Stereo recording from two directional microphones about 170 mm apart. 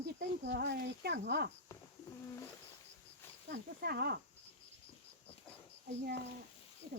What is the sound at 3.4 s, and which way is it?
Speech, 65° right (ahead or behind).